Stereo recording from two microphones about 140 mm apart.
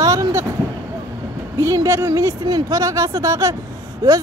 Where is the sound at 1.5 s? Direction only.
20° right (ahead or behind).